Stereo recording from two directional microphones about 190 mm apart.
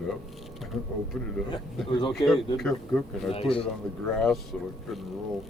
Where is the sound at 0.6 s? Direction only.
Centre (ahead or behind).